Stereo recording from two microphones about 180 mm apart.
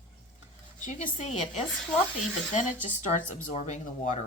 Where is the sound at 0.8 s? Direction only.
45° left (ahead or behind).